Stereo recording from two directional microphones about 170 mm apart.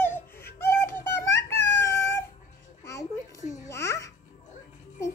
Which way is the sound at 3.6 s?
15° left (ahead or behind).